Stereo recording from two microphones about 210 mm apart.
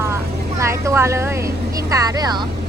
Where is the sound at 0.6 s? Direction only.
15° right (ahead or behind).